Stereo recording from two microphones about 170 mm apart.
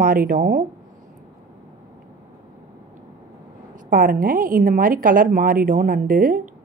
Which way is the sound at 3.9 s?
55° right (ahead or behind).